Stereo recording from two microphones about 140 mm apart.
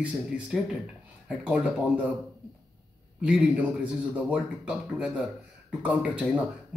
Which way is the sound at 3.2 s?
5° right (ahead or behind).